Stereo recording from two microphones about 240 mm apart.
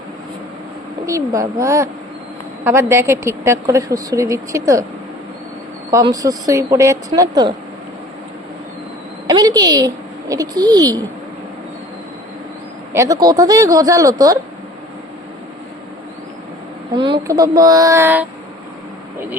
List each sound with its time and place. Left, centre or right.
1.0 s a woman's voice: centre
5.9 s a woman's voice: centre
9.2 s a woman's voice: centre
12.9 s a woman's voice: centre
16.9 s a woman's voice: centre